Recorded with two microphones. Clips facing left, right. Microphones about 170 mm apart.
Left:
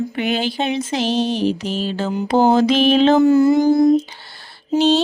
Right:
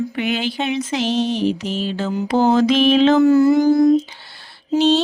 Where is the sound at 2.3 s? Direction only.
30° left (ahead or behind).